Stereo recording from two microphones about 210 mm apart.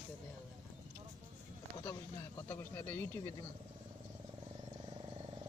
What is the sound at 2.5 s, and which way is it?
Speech, 10° left (ahead or behind).